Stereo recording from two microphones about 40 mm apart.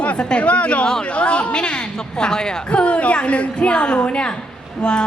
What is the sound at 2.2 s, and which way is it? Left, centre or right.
Speech, centre.